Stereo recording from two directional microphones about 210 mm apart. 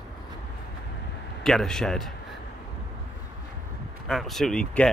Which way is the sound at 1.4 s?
Centre (ahead or behind).